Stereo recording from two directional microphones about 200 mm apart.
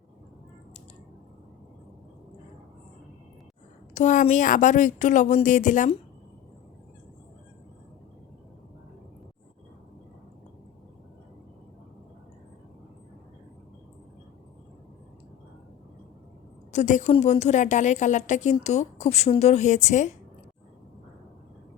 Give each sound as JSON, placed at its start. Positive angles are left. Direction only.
{"t": 3.9, "sound": "a woman's voice", "side_deg": 40}
{"t": 16.7, "sound": "a woman's voice", "side_deg": 35}